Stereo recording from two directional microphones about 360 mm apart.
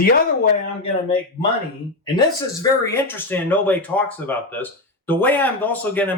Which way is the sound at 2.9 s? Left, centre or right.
Centre.